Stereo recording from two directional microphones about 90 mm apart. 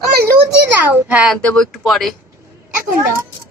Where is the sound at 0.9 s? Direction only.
15° right (ahead or behind).